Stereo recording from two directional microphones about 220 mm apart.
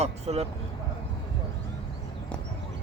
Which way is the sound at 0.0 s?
30° right (ahead or behind).